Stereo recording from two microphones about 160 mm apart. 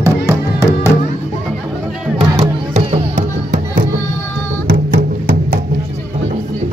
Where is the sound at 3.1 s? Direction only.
55° right (ahead or behind).